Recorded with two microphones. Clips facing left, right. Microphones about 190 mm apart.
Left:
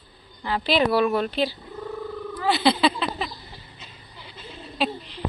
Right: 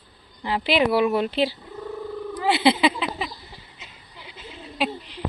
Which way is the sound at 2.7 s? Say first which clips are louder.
Even; 10° right (ahead or behind).